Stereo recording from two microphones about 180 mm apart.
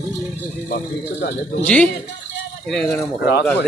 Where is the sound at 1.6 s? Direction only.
5° left (ahead or behind).